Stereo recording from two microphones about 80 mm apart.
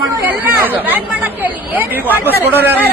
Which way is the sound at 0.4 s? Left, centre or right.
Right.